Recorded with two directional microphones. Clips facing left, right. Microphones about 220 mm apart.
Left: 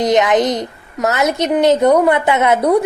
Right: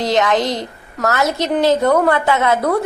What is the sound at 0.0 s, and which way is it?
A woman's voice, 20° left (ahead or behind).